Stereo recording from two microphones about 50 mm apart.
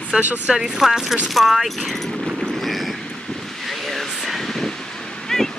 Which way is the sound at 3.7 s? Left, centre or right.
Centre.